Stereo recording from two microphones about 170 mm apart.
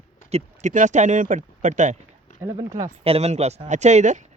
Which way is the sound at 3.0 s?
35° right (ahead or behind).